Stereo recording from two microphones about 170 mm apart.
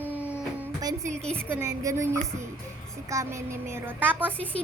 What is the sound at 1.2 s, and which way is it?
Speech, 5° left (ahead or behind).